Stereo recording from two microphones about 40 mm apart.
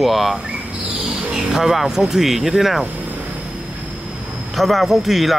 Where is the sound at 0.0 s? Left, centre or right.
Centre.